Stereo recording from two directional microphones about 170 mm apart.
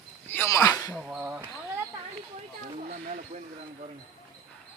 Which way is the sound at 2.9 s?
55° right (ahead or behind).